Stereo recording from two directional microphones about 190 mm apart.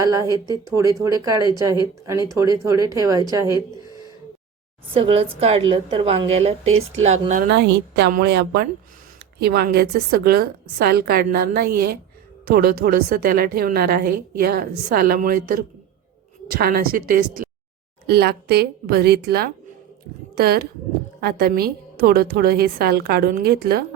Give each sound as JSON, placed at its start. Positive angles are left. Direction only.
{"t": 0.0, "sound": "speech", "side_deg": -20}
{"t": 4.9, "sound": "a woman's voice", "side_deg": -30}
{"t": 7.4, "sound": "a woman's voice", "side_deg": -60}